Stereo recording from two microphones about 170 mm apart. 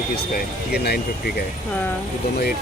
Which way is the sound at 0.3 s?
70° left (ahead or behind).